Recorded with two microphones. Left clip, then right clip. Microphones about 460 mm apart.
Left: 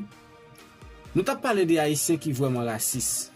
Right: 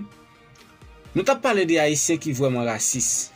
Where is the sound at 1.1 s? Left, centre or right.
Left.